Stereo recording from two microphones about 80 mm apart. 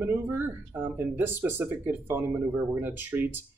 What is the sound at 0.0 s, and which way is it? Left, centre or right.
Speech, right.